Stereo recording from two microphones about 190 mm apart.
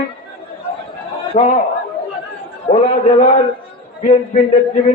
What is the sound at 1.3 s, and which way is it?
Speech, 35° left (ahead or behind).